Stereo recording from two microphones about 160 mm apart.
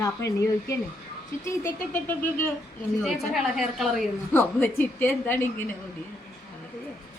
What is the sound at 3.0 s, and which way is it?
A woman's voice, centre (ahead or behind).